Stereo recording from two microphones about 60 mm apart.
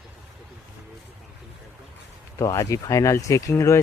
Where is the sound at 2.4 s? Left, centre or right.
Left.